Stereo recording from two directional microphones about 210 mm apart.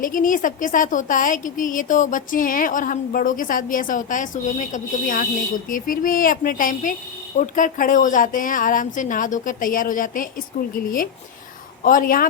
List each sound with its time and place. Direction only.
0.0 s a woman's voice: 40° left (ahead or behind)